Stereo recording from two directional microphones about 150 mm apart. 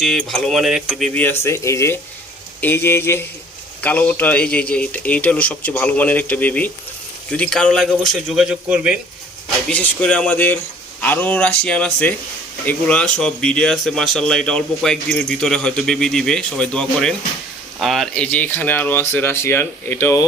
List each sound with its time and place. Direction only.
0.0 s speech: centre (ahead or behind)
9.6 s speech: 10° left (ahead or behind)